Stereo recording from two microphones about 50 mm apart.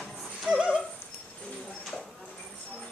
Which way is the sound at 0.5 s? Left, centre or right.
Right.